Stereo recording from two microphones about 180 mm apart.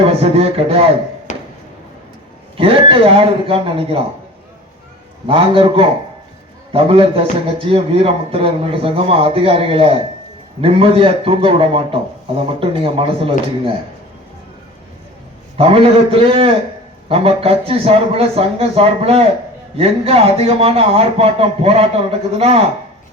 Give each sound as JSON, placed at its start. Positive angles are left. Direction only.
{"t": 0.0, "sound": "a man's voice", "side_deg": -35}
{"t": 1.3, "sound": "a sound", "side_deg": 45}
{"t": 2.6, "sound": "a man's voice", "side_deg": -30}
{"t": 5.2, "sound": "a man's voice", "side_deg": -30}
{"t": 15.5, "sound": "a man's voice", "side_deg": -30}